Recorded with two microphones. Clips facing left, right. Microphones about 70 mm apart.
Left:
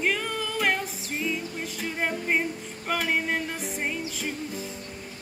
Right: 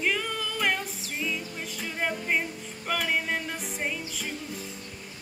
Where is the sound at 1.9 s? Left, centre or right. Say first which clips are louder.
Left 1 dB; centre.